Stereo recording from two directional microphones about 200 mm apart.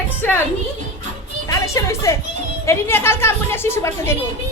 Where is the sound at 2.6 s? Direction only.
10° left (ahead or behind).